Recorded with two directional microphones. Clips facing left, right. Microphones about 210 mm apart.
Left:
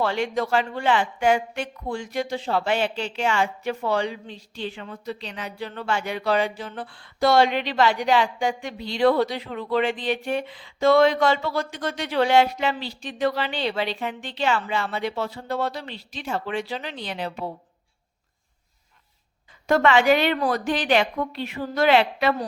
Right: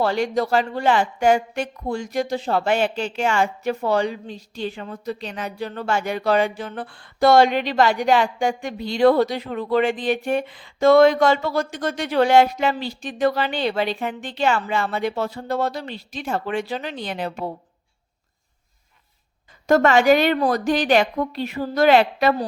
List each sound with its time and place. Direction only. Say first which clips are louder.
0.0 s speech: right 3 dB; 40° right (ahead or behind)
19.6 s speech: right 3 dB; 45° right (ahead or behind)